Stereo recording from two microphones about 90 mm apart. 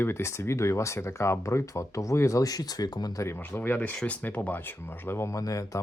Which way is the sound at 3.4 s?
25° left (ahead or behind).